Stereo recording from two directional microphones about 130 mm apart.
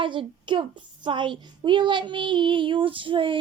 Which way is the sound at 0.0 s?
40° right (ahead or behind).